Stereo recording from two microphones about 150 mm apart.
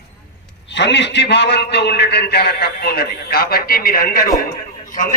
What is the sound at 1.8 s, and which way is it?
A man's voice, 90° left.